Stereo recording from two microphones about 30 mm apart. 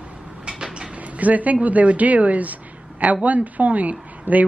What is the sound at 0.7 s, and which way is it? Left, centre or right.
A woman's voice, right.